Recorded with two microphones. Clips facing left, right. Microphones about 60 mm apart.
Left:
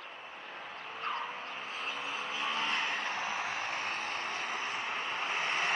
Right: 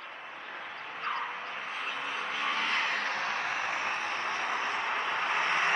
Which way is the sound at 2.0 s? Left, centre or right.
Right.